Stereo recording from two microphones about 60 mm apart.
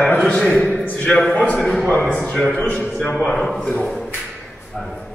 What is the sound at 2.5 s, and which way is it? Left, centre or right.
Speech, left.